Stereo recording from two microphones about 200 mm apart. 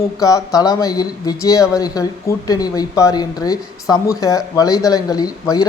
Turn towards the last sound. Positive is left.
turn(degrees=20)  # may be behind; listen again after turning